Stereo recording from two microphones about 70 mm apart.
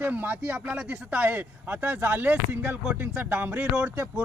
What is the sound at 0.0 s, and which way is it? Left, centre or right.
Speech, right.